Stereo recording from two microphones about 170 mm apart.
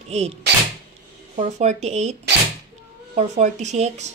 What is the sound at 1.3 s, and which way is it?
Speech, 40° right (ahead or behind).